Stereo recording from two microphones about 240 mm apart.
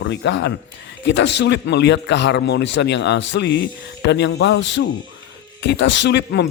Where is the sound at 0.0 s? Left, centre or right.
Left.